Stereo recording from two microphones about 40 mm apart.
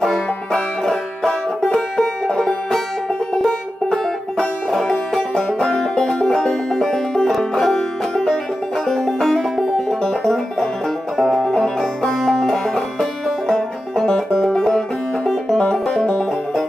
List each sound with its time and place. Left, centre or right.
0.0 s music: centre
11.1 s music: centre
11.5 s music: centre
16.0 s music: centre